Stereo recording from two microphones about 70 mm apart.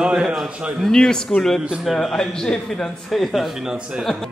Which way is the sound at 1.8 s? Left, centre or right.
Centre.